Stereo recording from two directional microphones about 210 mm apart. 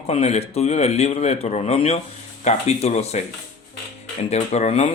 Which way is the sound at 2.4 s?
30° left (ahead or behind).